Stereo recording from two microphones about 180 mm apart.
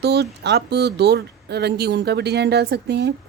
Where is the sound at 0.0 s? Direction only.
65° right (ahead or behind).